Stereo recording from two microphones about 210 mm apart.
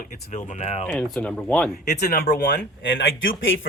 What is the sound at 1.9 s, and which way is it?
Speech, 50° left (ahead or behind).